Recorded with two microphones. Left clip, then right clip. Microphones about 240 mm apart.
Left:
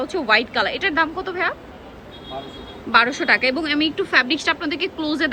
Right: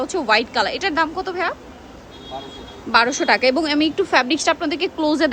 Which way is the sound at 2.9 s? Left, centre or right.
Centre.